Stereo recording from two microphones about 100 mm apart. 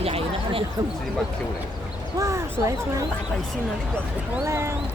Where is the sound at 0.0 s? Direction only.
75° right (ahead or behind).